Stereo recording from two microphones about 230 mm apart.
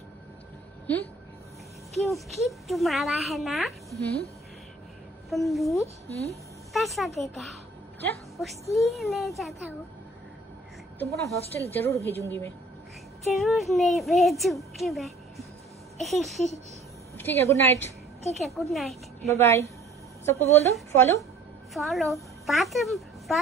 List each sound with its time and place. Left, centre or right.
0.9 s a woman's voice: centre
5.3 s a woman's voice: centre
6.0 s a woman's voice: left
6.7 s a woman's voice: centre
11.2 s a woman's voice: centre
17.2 s a woman's voice: centre
18.3 s a woman's voice: centre
19.2 s a woman's voice: centre
20.9 s a woman's voice: centre
21.7 s a woman's voice: centre